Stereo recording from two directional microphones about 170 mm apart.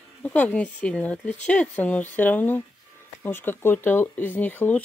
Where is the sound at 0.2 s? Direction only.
10° left (ahead or behind).